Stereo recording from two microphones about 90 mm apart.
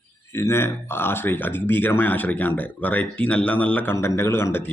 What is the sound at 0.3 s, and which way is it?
Speech, 30° left (ahead or behind).